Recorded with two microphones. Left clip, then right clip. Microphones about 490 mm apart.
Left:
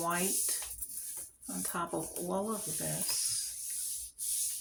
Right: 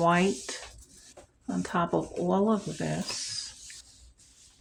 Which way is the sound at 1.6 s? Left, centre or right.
Left.